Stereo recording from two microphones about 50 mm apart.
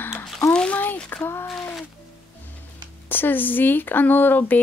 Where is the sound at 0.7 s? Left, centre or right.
Left.